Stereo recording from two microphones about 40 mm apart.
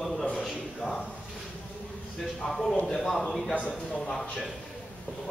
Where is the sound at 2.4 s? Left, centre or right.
Centre.